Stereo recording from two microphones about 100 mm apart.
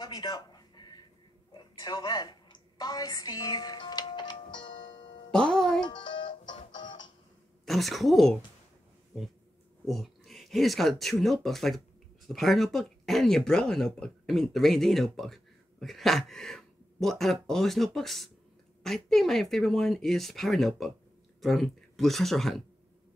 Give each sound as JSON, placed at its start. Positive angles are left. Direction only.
{"t": 0.0, "sound": "a sound", "side_deg": 45}
{"t": 5.3, "sound": "music", "side_deg": 10}
{"t": 5.9, "sound": "music", "side_deg": 50}
{"t": 7.6, "sound": "speech", "side_deg": 0}
{"t": 9.8, "sound": "speech", "side_deg": 0}